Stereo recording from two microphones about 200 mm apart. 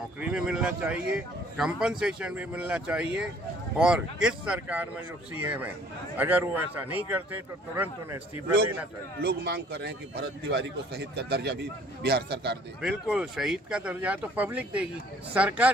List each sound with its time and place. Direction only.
0.2 s speech: 5° right (ahead or behind)
9.2 s a man's voice: 55° right (ahead or behind)
12.8 s speech: 5° right (ahead or behind)